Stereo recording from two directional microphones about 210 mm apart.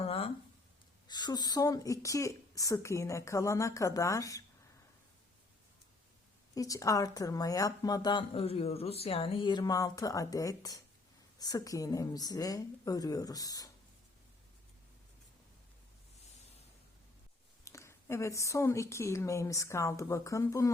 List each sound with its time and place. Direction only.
0.0 s a sound: 25° left (ahead or behind)
1.0 s speech: 20° left (ahead or behind)
6.5 s speech: 15° left (ahead or behind)
17.7 s speech: 15° left (ahead or behind)